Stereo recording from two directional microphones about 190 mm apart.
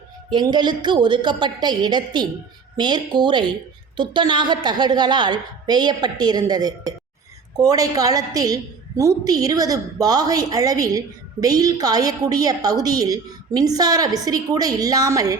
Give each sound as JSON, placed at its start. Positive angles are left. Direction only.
{"t": 0.3, "sound": "a woman's voice", "side_deg": -25}